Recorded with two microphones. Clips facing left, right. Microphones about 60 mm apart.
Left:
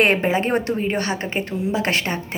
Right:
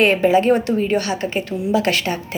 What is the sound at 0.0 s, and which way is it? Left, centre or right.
A woman's voice, left.